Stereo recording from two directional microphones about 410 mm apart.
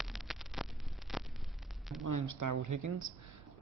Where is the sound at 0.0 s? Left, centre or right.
Centre.